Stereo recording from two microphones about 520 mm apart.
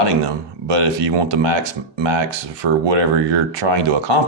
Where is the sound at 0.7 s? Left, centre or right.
Right.